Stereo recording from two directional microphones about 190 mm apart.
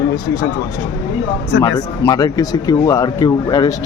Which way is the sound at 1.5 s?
70° left (ahead or behind).